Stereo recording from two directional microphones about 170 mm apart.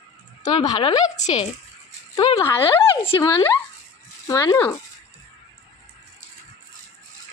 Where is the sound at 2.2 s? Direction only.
20° left (ahead or behind).